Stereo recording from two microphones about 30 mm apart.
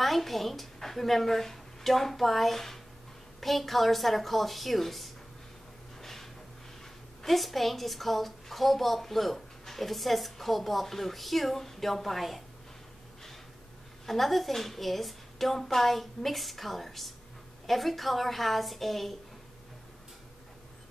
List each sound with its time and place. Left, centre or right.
0.0 s a woman's voice: centre
5.9 s a sound: centre
7.2 s a woman's voice: centre
14.0 s a woman's voice: centre